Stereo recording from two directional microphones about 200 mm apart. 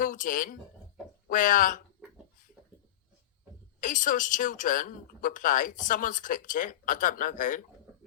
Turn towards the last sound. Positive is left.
turn(degrees=40)  # may be behind; listen again after turning